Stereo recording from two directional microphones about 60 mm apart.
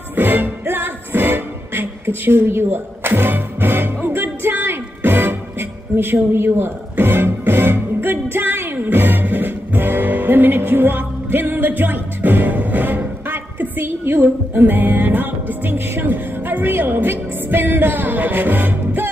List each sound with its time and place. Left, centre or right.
0.1 s music: right